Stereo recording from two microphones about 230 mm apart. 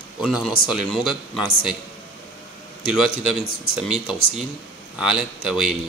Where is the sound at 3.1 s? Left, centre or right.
Left.